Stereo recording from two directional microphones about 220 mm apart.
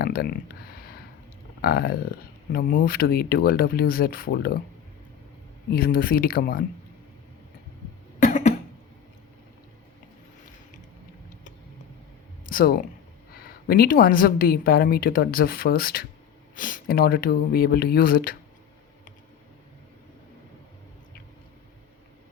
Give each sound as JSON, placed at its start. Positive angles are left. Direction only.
{"t": 0.0, "sound": "speech", "side_deg": 45}
{"t": 5.7, "sound": "speech", "side_deg": 45}
{"t": 8.2, "sound": "cough", "side_deg": 35}
{"t": 12.5, "sound": "speech", "side_deg": 40}